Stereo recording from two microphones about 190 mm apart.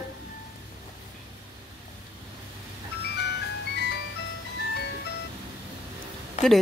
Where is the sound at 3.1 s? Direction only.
60° left (ahead or behind).